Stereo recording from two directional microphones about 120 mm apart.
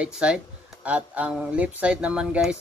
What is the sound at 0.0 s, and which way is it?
Speech, 10° right (ahead or behind).